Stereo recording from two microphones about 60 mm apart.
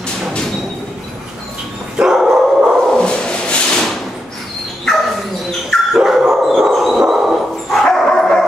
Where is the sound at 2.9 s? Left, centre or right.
Centre.